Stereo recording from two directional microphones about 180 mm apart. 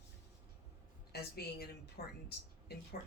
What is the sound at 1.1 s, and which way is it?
A woman's voice, 60° left (ahead or behind).